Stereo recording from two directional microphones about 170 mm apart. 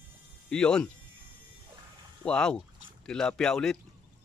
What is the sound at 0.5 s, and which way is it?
Speech, 5° left (ahead or behind).